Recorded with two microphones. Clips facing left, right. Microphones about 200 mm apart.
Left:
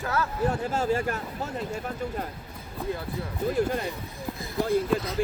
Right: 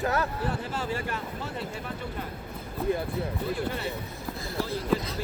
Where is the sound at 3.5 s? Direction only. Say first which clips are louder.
Left 5 dB; 45° left (ahead or behind).